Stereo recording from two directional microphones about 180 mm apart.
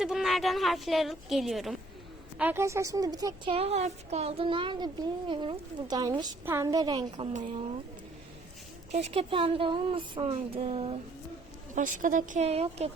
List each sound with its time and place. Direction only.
0.0 s a woman's voice: centre (ahead or behind)
2.4 s a woman's voice: 10° right (ahead or behind)
3.5 s speech: 35° right (ahead or behind)
8.9 s speech: 35° right (ahead or behind)
11.7 s a woman's voice: 45° right (ahead or behind)